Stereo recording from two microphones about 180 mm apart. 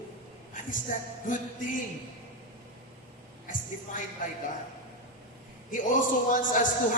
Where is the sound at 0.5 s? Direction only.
45° left (ahead or behind).